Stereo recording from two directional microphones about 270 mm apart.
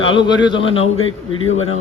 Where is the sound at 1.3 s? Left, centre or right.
Left.